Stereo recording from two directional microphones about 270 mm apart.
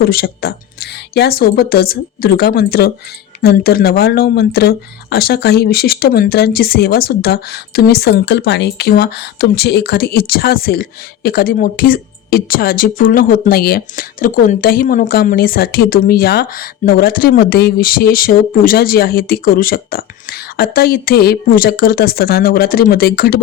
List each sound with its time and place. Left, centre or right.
0.0 s speech: left